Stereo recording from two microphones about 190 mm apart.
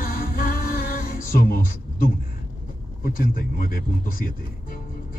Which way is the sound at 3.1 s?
50° left (ahead or behind).